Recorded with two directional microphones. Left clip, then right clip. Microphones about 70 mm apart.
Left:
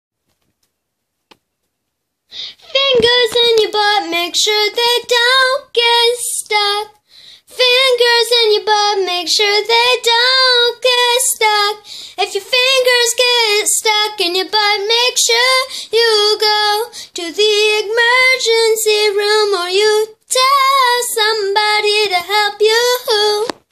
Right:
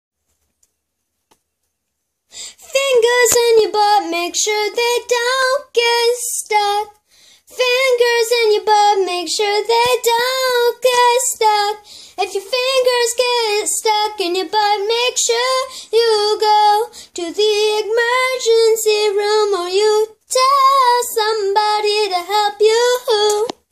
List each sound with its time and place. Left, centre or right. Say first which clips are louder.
2.3 s a sound: left 2 dB; right
2.9 s child singing: even; centre
5.5 s child singing: left 2 dB; right
9.7 s child singing: left 2 dB; right